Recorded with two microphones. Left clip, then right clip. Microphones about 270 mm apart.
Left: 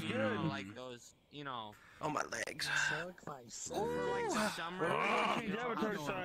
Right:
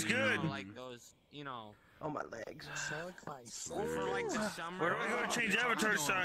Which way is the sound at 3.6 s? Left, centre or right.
Right.